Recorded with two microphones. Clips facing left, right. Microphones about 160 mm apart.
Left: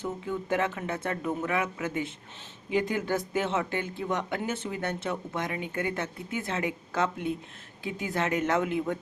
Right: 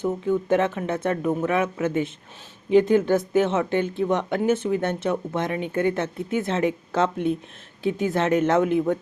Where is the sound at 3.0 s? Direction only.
20° right (ahead or behind).